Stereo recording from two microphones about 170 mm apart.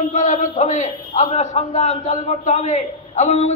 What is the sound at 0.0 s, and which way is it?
A man's voice, 45° left (ahead or behind).